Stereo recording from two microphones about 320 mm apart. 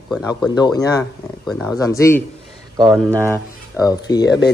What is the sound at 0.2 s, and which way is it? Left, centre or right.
Speech, centre.